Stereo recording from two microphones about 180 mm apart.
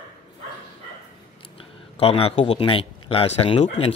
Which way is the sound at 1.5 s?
30° left (ahead or behind).